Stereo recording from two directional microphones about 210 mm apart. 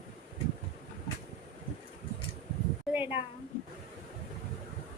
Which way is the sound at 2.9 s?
10° right (ahead or behind).